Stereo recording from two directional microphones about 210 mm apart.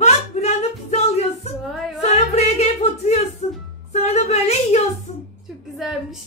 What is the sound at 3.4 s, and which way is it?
Music, 35° left (ahead or behind).